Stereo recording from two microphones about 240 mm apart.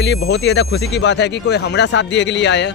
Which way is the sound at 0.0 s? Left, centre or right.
Left.